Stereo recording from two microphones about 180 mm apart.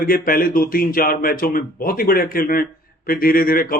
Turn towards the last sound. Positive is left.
turn(degrees=55)  # may be behind; listen again after turning